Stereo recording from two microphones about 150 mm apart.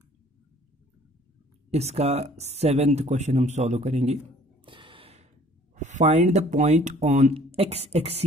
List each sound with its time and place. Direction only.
1.7 s speech: 45° right (ahead or behind)
4.6 s gasp: 35° right (ahead or behind)
5.8 s speech: 50° right (ahead or behind)